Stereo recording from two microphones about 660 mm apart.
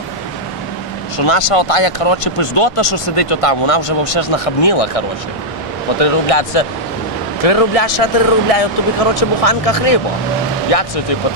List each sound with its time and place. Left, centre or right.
1.1 s speech: left